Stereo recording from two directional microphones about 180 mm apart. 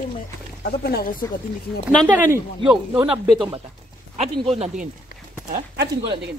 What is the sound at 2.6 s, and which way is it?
Speech, 25° right (ahead or behind).